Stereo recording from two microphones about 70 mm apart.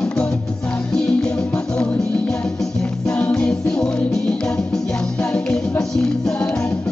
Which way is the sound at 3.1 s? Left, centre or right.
Centre.